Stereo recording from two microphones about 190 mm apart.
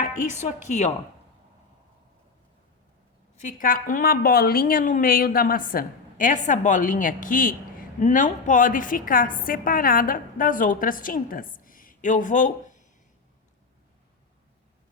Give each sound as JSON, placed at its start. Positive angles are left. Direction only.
{"t": 0.3, "sound": "a woman's voice", "side_deg": 40}
{"t": 3.3, "sound": "a woman's voice", "side_deg": 45}